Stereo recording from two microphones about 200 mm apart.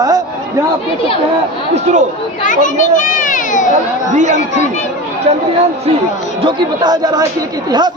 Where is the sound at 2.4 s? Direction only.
40° left (ahead or behind).